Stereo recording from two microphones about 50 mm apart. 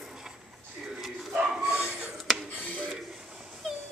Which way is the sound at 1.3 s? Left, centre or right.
Centre.